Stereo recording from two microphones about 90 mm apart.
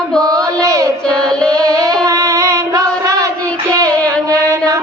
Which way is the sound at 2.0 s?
40° right (ahead or behind).